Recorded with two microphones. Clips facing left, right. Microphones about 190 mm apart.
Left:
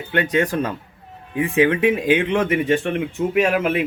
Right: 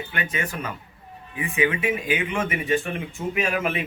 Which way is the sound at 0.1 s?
70° left (ahead or behind).